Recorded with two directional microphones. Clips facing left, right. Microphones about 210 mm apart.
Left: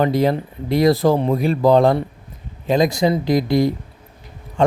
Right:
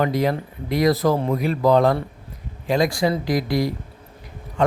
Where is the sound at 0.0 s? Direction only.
30° left (ahead or behind).